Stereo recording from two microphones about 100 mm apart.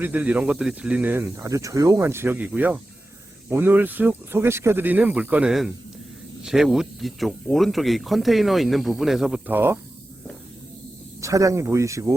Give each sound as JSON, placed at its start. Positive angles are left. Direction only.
{"t": 0.0, "sound": "speech", "side_deg": -15}
{"t": 1.1, "sound": "speech", "side_deg": -25}
{"t": 9.5, "sound": "speech", "side_deg": -20}
{"t": 11.2, "sound": "speech", "side_deg": -35}